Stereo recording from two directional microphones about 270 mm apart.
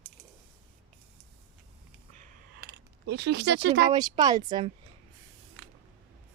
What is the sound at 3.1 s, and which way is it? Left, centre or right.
Speech, right.